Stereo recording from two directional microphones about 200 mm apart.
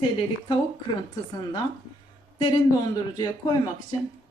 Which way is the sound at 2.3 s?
25° left (ahead or behind).